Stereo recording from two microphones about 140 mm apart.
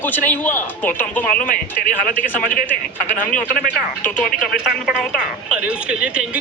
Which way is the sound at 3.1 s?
70° left (ahead or behind).